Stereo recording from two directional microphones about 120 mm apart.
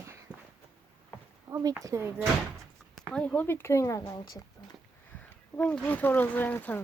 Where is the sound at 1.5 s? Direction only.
25° right (ahead or behind).